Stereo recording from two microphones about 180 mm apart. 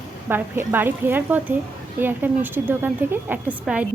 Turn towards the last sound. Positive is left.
turn(degrees=-5)  # may be behind; listen again after turning